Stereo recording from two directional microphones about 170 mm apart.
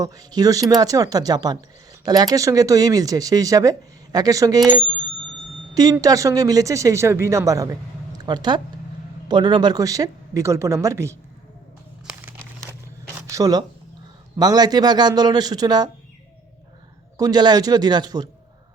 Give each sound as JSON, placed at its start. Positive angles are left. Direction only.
{"t": 0.0, "sound": "speech", "side_deg": -20}
{"t": 5.7, "sound": "speech", "side_deg": -20}
{"t": 13.2, "sound": "speech", "side_deg": -20}
{"t": 17.2, "sound": "speech", "side_deg": -25}